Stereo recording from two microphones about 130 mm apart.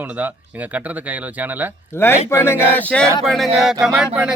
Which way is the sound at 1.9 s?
20° left (ahead or behind).